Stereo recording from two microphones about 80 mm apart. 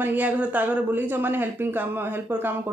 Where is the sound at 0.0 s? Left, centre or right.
Right.